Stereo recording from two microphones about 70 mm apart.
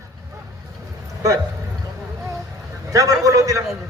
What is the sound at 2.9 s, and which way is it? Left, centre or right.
Speech, right.